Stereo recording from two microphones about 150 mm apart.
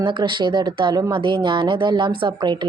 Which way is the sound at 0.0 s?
30° right (ahead or behind).